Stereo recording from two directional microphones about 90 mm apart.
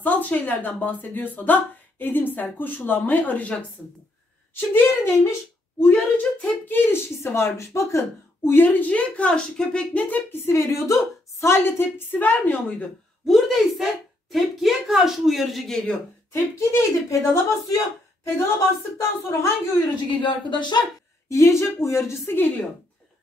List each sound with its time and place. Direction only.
0.0 s speech: 20° left (ahead or behind)
4.6 s speech: 20° left (ahead or behind)
8.5 s speech: 20° left (ahead or behind)
13.3 s speech: centre (ahead or behind)
16.5 s speech: 35° left (ahead or behind)
20.1 s speech: 60° left (ahead or behind)
21.3 s speech: 30° left (ahead or behind)